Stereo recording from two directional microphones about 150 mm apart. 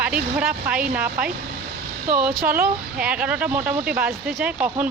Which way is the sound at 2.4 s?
75° right (ahead or behind).